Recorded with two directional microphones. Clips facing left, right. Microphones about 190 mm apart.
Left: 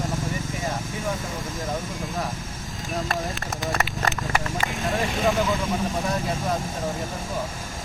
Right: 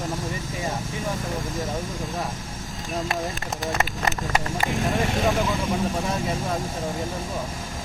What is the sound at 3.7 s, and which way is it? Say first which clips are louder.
Vehicle: right 1 dB; 20° right (ahead or behind).